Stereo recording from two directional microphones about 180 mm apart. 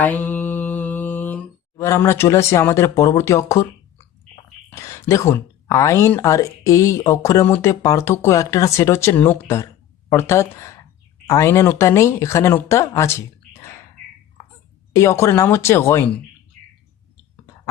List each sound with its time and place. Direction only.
0.0 s mantra: 10° left (ahead or behind)
4.7 s speech: 15° left (ahead or behind)
14.9 s speech: 15° left (ahead or behind)